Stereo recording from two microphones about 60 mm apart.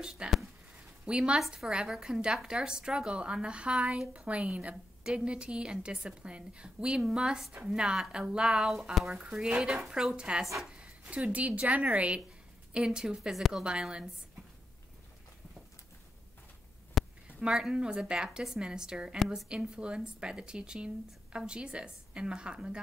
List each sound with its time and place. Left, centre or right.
0.0 s a woman's voice: centre
10.1 s speech: centre
10.6 s a sound: centre
11.1 s a woman's voice: right
17.0 s a sound: centre
17.4 s speech: centre